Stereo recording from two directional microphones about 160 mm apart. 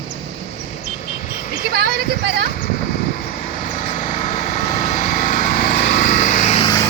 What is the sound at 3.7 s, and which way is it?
Vehicle, 50° left (ahead or behind).